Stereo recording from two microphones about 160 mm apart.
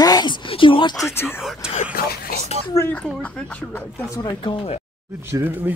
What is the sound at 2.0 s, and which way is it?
Speech, 65° left (ahead or behind).